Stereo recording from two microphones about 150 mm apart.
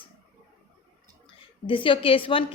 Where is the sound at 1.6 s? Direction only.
35° left (ahead or behind).